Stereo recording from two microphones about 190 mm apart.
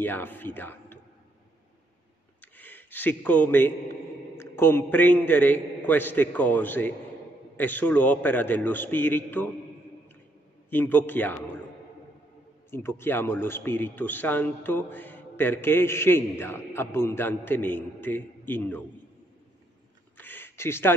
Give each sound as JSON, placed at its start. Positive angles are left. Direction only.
{"t": 0.0, "sound": "a man's voice", "side_deg": 10}
{"t": 2.4, "sound": "a sound", "side_deg": 10}
{"t": 4.4, "sound": "a man's voice", "side_deg": 10}
{"t": 10.7, "sound": "a man's voice", "side_deg": 10}
{"t": 12.7, "sound": "a man's voice", "side_deg": 10}
{"t": 20.2, "sound": "a sound", "side_deg": 10}